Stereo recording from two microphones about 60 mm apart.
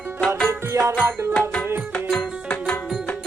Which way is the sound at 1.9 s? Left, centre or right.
Centre.